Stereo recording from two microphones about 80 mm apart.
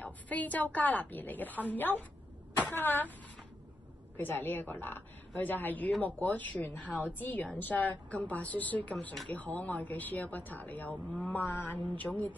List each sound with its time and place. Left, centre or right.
0.0 s a woman's voice: centre
4.2 s a woman's voice: left